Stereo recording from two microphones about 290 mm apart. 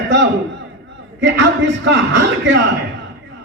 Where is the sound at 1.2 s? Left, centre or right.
Right.